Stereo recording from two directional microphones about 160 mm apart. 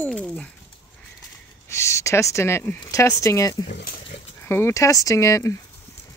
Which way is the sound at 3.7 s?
65° left (ahead or behind).